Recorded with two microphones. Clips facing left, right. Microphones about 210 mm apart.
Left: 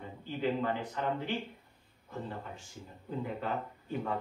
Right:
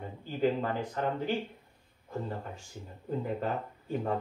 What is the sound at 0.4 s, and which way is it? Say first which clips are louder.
Speech: right 3 dB; 40° right (ahead or behind).